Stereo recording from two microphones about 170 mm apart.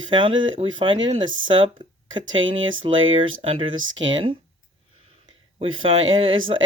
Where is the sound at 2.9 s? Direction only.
30° right (ahead or behind).